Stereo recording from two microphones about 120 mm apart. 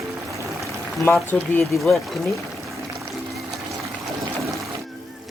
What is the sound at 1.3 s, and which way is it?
Speech, 20° left (ahead or behind).